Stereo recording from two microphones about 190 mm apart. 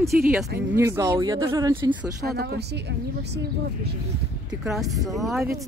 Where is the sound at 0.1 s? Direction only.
Centre (ahead or behind).